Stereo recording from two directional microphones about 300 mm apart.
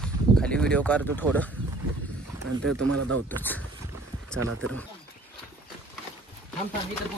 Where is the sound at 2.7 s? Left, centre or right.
Right.